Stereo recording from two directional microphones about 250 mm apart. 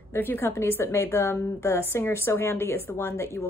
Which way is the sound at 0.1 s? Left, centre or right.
Centre.